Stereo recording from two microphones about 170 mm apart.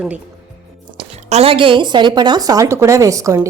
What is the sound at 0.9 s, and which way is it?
A woman's voice, 35° right (ahead or behind).